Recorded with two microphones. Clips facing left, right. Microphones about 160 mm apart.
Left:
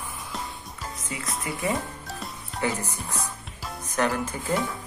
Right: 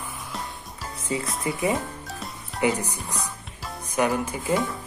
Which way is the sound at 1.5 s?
25° right (ahead or behind).